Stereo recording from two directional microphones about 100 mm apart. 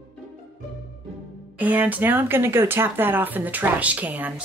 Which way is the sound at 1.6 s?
15° right (ahead or behind).